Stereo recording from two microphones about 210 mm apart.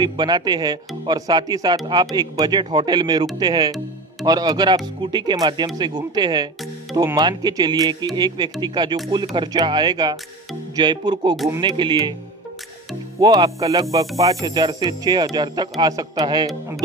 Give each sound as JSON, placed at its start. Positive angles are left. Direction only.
{"t": 0.0, "sound": "speech", "side_deg": -20}
{"t": 13.2, "sound": "speech", "side_deg": -20}